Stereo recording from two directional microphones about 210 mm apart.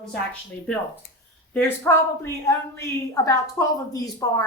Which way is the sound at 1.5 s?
10° left (ahead or behind).